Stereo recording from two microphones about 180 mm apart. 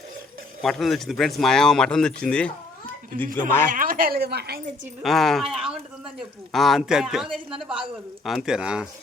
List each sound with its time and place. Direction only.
0.6 s speech: centre (ahead or behind)
3.1 s a woman's voice: 55° right (ahead or behind)
5.0 s speech: centre (ahead or behind)